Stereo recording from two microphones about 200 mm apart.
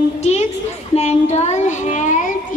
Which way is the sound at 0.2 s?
30° left (ahead or behind).